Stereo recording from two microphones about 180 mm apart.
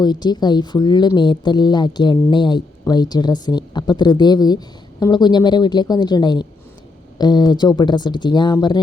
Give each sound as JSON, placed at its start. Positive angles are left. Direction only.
{"t": 0.0, "sound": "a woman's voice", "side_deg": 25}